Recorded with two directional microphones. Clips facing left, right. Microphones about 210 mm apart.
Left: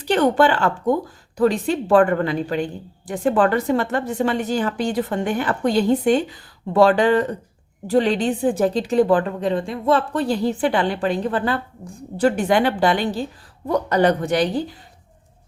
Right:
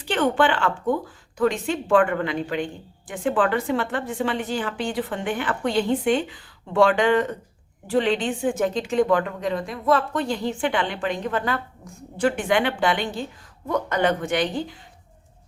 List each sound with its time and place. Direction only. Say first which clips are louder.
0.0 s a woman's voice: left 4 dB; 40° left (ahead or behind)